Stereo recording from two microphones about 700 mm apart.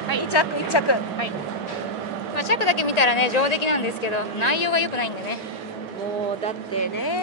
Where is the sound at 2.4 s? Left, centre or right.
Left.